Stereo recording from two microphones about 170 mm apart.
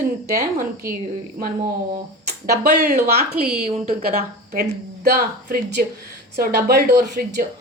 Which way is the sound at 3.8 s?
55° right (ahead or behind).